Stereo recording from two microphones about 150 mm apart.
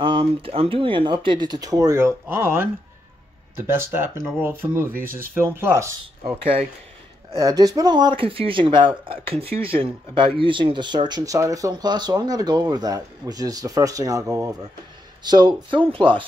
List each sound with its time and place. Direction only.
0.0 s speech: 35° right (ahead or behind); by 5.9 s 15° right (ahead or behind)
6.2 s speech: 40° right (ahead or behind)
7.3 s speech: 25° right (ahead or behind)